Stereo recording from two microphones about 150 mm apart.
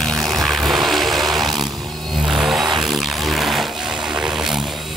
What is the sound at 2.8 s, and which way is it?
Music, centre (ahead or behind).